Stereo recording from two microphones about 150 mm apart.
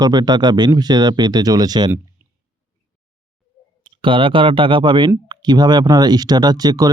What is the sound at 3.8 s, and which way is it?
Speech, 35° right (ahead or behind).